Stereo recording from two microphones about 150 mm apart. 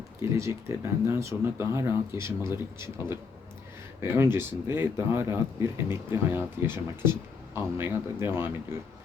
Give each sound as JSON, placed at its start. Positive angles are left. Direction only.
{"t": 0.2, "sound": "speech", "side_deg": -20}